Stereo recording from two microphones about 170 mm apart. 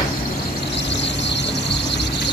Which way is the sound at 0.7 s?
90° left.